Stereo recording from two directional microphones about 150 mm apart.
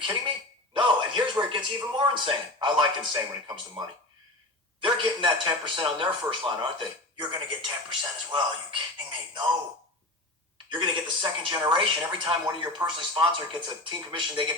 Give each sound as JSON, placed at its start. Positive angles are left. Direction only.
{"t": 0.7, "sound": "a sound", "side_deg": -30}
{"t": 3.1, "sound": "a man's voice", "side_deg": -30}
{"t": 10.7, "sound": "a man's voice", "side_deg": -30}